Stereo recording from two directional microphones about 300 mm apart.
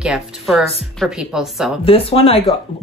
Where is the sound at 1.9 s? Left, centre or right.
Centre.